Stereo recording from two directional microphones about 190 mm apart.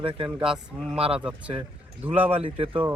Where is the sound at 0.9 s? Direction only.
30° right (ahead or behind).